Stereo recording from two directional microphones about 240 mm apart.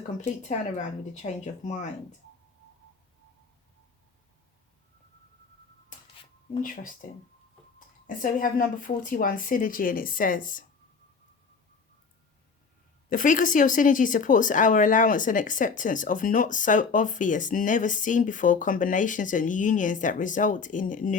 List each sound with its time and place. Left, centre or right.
0.4 s a woman's voice: left
6.6 s speech: left
8.0 s speech: left
13.1 s speech: left